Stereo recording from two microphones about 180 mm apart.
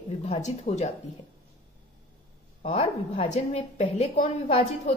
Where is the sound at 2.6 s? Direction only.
35° left (ahead or behind).